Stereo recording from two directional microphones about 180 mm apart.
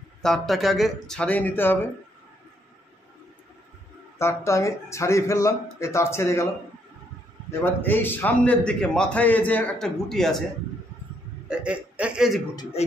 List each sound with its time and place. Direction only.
0.2 s speech: centre (ahead or behind)
4.2 s a man's voice: 15° left (ahead or behind)
7.6 s a man's voice: 10° left (ahead or behind)
11.4 s speech: 5° right (ahead or behind)